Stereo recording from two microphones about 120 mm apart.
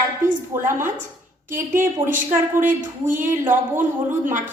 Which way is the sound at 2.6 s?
90° right.